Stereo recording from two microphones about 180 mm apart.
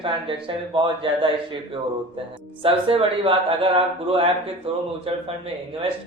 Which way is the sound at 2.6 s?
30° right (ahead or behind).